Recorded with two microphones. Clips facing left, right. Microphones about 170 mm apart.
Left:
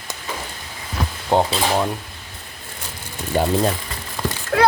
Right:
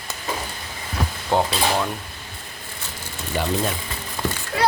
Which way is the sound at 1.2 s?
20° left (ahead or behind).